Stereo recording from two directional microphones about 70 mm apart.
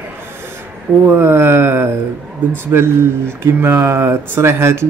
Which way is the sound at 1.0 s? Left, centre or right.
Right.